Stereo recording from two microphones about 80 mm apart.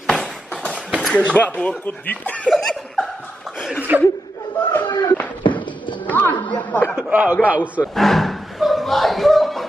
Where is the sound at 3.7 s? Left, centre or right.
Right.